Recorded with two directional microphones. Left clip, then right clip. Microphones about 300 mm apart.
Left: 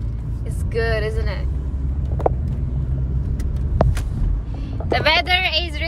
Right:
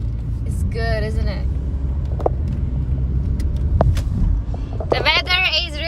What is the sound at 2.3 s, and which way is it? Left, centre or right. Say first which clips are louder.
Vehicle: left 1 dB; centre.